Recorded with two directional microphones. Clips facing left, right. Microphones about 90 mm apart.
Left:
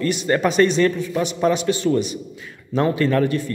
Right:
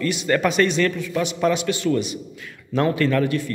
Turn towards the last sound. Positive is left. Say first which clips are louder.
# left 1 dB
turn(degrees=35)  # may be behind; listen again after turning